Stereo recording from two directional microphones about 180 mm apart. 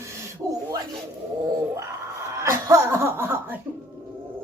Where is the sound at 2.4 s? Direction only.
15° right (ahead or behind).